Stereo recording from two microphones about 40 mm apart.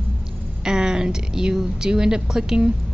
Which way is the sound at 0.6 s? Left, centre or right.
Centre.